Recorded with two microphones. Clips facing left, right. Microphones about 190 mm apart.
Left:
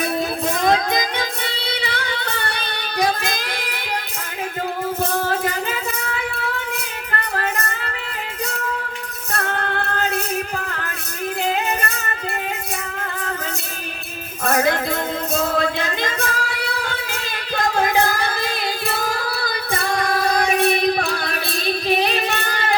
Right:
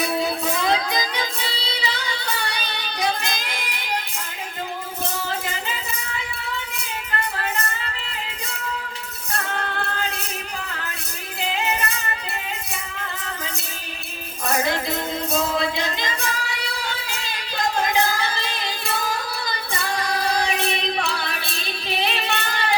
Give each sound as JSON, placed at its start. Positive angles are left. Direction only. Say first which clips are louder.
{"t": 0.0, "sound": "music", "louder": "left 1 dB", "side_deg": 45}
{"t": 5.1, "sound": "music", "louder": "left 7 dB", "side_deg": 55}
{"t": 9.6, "sound": "music", "louder": "left 4 dB", "side_deg": 55}
{"t": 11.3, "sound": "music", "louder": "left 2 dB", "side_deg": 50}
{"t": 14.4, "sound": "music", "louder": "left 4 dB", "side_deg": 55}